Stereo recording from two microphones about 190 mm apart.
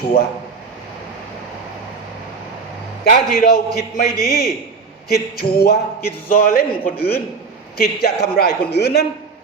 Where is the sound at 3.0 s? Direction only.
50° left (ahead or behind).